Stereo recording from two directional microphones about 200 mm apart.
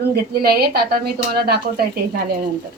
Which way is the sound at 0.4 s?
50° right (ahead or behind).